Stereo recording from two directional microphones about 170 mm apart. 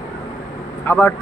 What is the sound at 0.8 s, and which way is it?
Speech, 15° left (ahead or behind).